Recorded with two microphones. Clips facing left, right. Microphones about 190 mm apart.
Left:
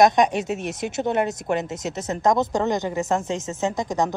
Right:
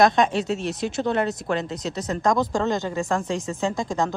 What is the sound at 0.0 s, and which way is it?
Speech, 15° left (ahead or behind).